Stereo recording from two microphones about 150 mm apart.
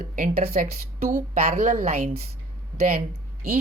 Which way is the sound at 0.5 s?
70° right (ahead or behind).